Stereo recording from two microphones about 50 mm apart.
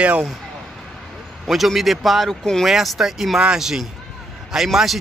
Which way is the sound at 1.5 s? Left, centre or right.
Centre.